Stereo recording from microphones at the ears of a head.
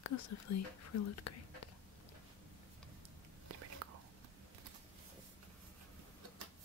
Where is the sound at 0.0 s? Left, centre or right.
Left.